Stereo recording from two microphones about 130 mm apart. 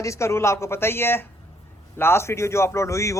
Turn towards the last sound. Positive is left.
turn(degrees=25)  # may be behind; listen again after turning